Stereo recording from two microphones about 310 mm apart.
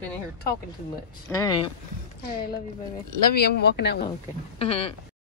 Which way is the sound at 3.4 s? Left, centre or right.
Left.